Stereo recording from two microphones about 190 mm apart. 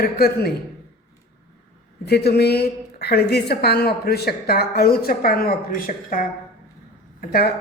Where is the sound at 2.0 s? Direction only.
60° left (ahead or behind).